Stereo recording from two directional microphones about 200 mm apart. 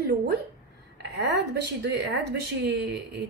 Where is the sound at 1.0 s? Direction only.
55° right (ahead or behind).